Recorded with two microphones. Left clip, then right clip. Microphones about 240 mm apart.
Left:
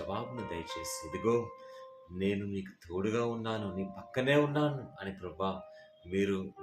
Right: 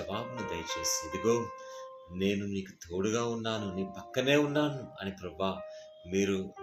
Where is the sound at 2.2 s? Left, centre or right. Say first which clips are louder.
Right 2 dB; centre.